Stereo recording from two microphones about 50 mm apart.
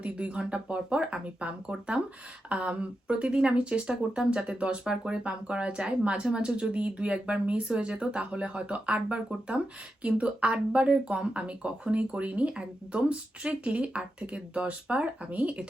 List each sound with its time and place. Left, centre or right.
0.0 s speech: right